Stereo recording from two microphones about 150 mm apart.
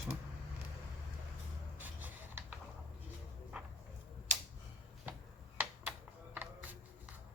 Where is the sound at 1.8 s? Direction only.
10° right (ahead or behind).